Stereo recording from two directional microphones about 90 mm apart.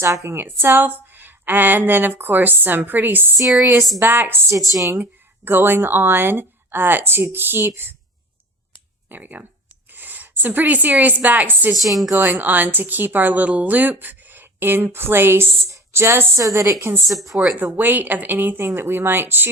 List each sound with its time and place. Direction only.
0.0 s a woman's voice: 30° right (ahead or behind)
9.0 s a woman's voice: 20° right (ahead or behind)
11.7 s a woman's voice: centre (ahead or behind)
12.1 s a woman's voice: 25° right (ahead or behind)
17.6 s a woman's voice: 20° right (ahead or behind)